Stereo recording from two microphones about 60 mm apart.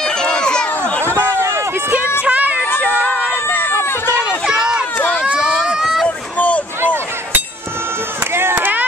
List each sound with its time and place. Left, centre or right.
0.0 s a sound: centre
2.2 s a sound: right
3.4 s run: left
4.5 s run: centre
4.9 s crowd: left
5.7 s rowboat: centre
6.0 s boat: left
6.8 s a sound: right
8.3 s chop: right